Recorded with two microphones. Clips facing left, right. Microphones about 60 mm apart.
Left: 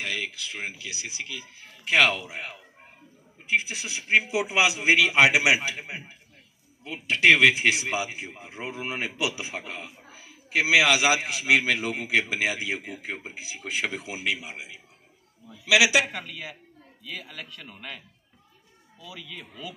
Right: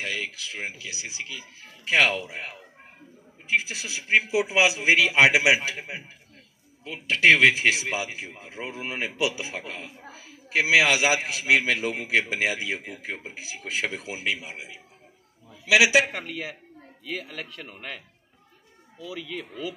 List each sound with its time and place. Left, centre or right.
0.0 s a man's voice: right
3.4 s a man's voice: right
10.5 s a man's voice: right
19.2 s speech: right